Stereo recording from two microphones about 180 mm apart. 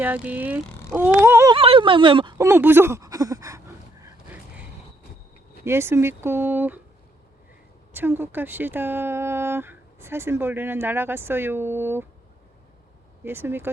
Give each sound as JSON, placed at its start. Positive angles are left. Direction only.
{"t": 0.0, "sound": "speech", "side_deg": -10}
{"t": 1.5, "sound": "speech", "side_deg": -30}
{"t": 2.4, "sound": "speech", "side_deg": -15}
{"t": 4.0, "sound": "a sound", "side_deg": -10}
{"t": 5.6, "sound": "speech", "side_deg": -15}
{"t": 7.9, "sound": "speech", "side_deg": -10}
{"t": 13.2, "sound": "speech", "side_deg": -10}